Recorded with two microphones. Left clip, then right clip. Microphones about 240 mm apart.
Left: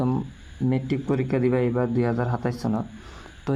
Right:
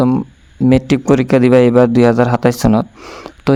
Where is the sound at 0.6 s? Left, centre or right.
Right.